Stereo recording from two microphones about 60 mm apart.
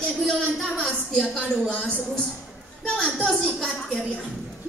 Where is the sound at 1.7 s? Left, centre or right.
Left.